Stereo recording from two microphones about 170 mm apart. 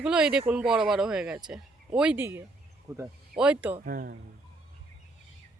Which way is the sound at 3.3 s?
5° right (ahead or behind).